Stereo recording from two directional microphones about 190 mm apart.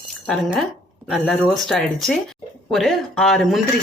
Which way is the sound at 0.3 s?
Centre (ahead or behind).